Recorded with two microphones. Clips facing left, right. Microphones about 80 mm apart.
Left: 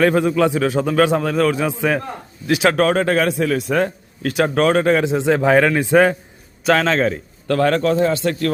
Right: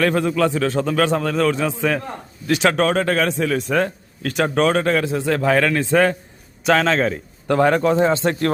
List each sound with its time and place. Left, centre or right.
0.0 s a man's voice: centre
6.7 s a man's voice: centre
7.4 s speech: centre